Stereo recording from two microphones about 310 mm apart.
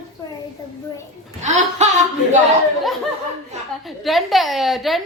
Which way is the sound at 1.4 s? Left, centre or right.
Right.